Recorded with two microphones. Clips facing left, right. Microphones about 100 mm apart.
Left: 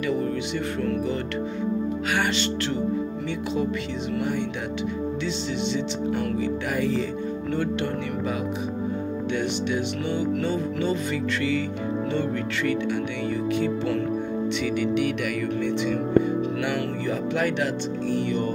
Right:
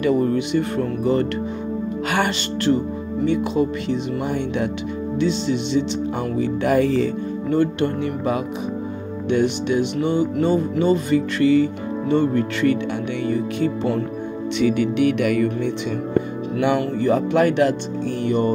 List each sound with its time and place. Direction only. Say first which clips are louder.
0.0 s music: right 7 dB; 50° right (ahead or behind)
5.2 s music: right 6 dB; 55° right (ahead or behind)
6.6 s music: right 7 dB; 65° right (ahead or behind)
7.5 s music: right 8 dB; 50° right (ahead or behind)
9.3 s speech: right 8 dB; 55° right (ahead or behind)
10.4 s music: right 7 dB; 50° right (ahead or behind)
13.2 s speech: right 4 dB; 50° right (ahead or behind)
14.6 s speech: right 9 dB; 65° right (ahead or behind)
17.0 s music: right 10 dB; 55° right (ahead or behind)